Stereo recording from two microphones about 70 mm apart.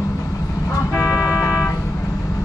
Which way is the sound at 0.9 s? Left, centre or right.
Left.